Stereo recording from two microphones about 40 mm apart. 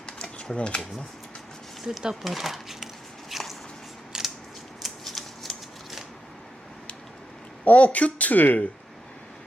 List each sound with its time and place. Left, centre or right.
0.0 s a sound: left
0.5 s speech: left
1.8 s a sound: centre
4.1 s scissors: centre
4.8 s scissors: centre
7.6 s speech: left